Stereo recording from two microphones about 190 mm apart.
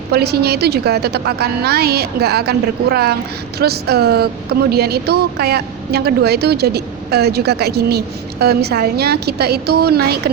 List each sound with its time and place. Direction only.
0.1 s speech: 60° right (ahead or behind)